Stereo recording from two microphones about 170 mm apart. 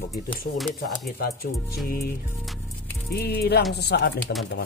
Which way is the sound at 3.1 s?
70° left (ahead or behind).